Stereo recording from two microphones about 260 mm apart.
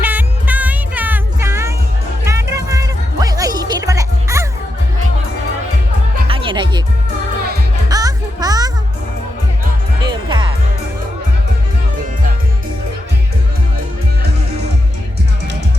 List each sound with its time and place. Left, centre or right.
0.0 s music: centre
6.2 s music: centre
7.9 s music: centre
10.0 s music: centre